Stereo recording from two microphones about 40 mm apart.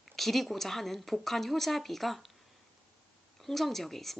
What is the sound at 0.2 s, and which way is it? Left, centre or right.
Speech, centre.